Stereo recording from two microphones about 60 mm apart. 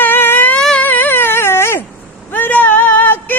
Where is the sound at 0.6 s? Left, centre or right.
Centre.